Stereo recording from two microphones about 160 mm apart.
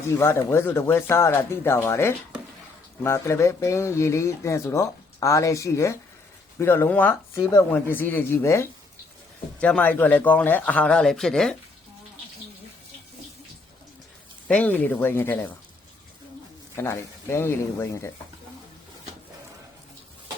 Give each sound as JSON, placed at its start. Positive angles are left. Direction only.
{"t": 0.1, "sound": "speech", "side_deg": 15}
{"t": 14.4, "sound": "speech", "side_deg": 10}
{"t": 16.7, "sound": "speech", "side_deg": 15}